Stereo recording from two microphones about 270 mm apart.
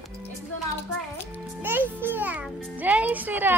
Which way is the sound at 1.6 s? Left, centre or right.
Centre.